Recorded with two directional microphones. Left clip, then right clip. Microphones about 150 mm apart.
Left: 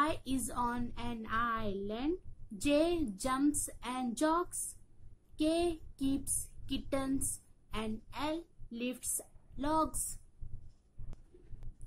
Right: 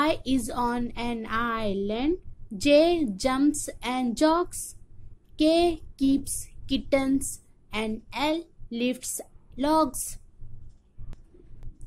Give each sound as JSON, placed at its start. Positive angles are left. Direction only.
{"t": 0.0, "sound": "a woman's voice", "side_deg": -20}